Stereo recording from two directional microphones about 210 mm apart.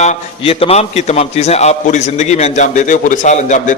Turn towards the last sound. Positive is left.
turn(degrees=35)  # may be behind; listen again after turning